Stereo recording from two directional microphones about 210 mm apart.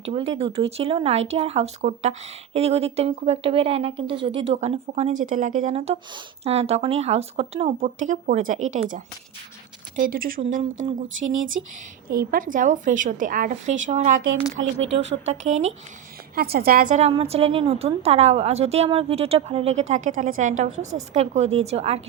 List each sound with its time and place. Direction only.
0.0 s a woman's voice: 30° right (ahead or behind)
9.9 s speech: 40° right (ahead or behind)
10.4 s speech: 30° right (ahead or behind)
12.0 s speech: 45° right (ahead or behind)
15.3 s speech: 35° right (ahead or behind)
16.3 s a woman's voice: 45° right (ahead or behind)
20.6 s a woman's voice: 75° right (ahead or behind)
20.9 s speech: 30° right (ahead or behind)